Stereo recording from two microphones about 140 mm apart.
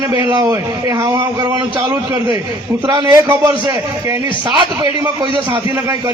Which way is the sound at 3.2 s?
20° right (ahead or behind).